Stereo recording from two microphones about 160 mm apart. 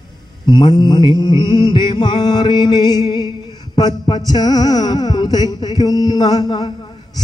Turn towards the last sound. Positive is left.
turn(degrees=30)  # may be behind; listen again after turning